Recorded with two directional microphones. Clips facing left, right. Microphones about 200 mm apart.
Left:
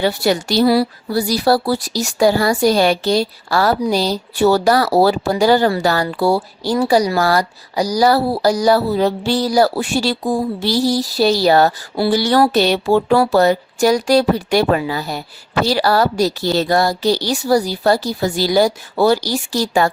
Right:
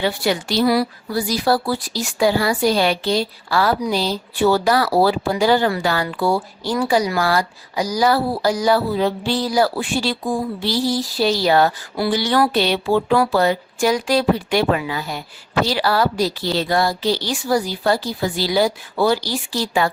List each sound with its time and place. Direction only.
0.2 s speech: 40° left (ahead or behind)